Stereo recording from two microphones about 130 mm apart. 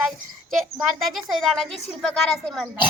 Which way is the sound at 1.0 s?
Centre (ahead or behind).